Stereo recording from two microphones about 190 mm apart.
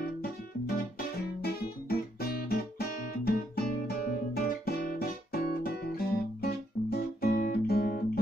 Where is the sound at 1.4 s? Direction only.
55° left (ahead or behind).